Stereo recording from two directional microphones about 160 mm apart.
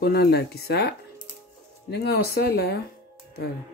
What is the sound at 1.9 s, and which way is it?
Speech, 85° left.